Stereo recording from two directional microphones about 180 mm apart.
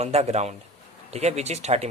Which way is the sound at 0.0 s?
35° right (ahead or behind).